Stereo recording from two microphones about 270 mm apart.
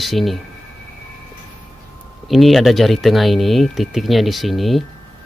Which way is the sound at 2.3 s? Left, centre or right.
Centre.